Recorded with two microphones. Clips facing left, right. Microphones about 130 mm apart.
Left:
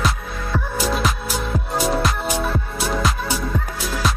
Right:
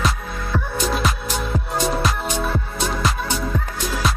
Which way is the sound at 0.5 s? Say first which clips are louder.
Even; centre (ahead or behind).